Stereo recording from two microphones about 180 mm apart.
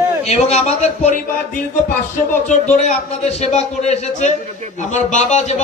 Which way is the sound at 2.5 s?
40° left (ahead or behind).